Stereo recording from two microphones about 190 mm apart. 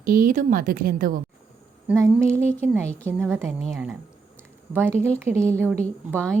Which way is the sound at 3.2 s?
Centre (ahead or behind).